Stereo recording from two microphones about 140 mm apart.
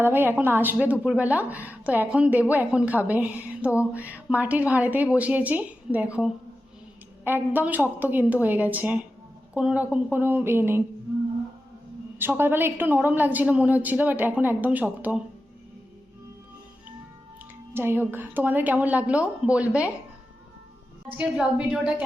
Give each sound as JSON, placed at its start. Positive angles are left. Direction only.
{"t": 0.0, "sound": "a woman's voice", "side_deg": -15}
{"t": 12.2, "sound": "a woman's voice", "side_deg": -15}
{"t": 17.7, "sound": "a woman's voice", "side_deg": -15}
{"t": 21.2, "sound": "a woman's voice", "side_deg": -10}